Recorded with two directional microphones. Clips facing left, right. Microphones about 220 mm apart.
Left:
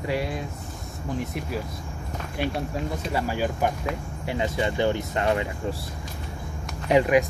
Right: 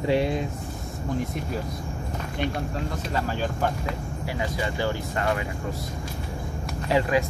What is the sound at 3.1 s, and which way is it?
Speech, 10° left (ahead or behind).